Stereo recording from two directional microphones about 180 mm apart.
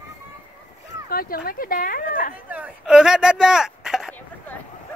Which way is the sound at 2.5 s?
5° right (ahead or behind).